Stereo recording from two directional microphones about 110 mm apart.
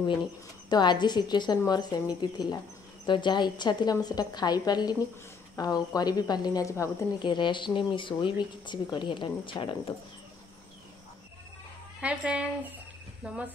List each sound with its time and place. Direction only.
0.7 s speech: 40° left (ahead or behind)
7.2 s speech: 45° left (ahead or behind)
12.0 s speech: 10° right (ahead or behind)